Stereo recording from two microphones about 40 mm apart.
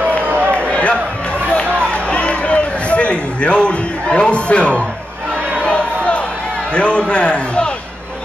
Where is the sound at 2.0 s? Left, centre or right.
Left.